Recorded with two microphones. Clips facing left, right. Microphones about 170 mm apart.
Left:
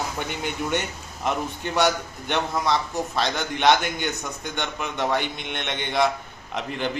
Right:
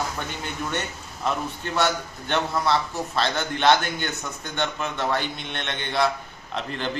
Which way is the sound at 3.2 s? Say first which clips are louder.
Right 2 dB; 15° left (ahead or behind).